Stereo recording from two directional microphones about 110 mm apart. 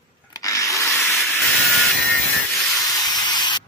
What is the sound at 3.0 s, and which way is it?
Spray, 40° left (ahead or behind).